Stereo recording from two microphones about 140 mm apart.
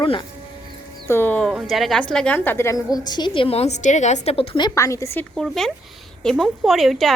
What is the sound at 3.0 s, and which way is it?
A woman's voice, 30° left (ahead or behind).